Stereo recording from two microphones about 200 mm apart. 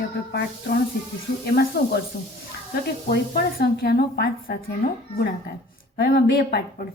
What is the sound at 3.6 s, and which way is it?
A woman's voice, 50° left (ahead or behind).